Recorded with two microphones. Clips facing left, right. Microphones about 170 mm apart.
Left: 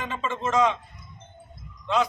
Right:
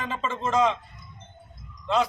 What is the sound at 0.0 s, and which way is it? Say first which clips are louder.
Speech: even; centre (ahead or behind).